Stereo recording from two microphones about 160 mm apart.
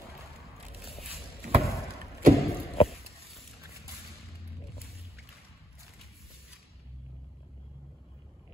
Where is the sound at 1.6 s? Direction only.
20° left (ahead or behind).